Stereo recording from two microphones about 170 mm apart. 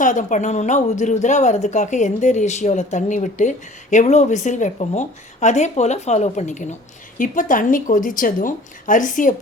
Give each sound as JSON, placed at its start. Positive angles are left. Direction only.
{"t": 0.0, "sound": "speech", "side_deg": 50}